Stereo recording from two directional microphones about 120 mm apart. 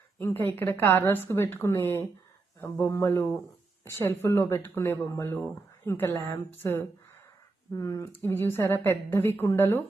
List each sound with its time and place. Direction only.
0.2 s a woman's voice: 15° left (ahead or behind)